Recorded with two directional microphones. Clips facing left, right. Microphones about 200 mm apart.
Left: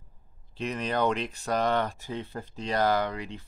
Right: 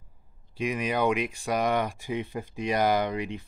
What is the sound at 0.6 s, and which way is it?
Speech, 10° right (ahead or behind).